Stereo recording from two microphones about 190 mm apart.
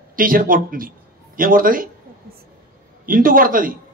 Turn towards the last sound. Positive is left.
turn(degrees=-45)  # may be behind; listen again after turning